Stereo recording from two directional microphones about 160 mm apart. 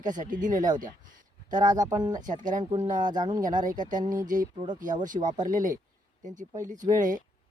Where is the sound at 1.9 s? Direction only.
25° right (ahead or behind).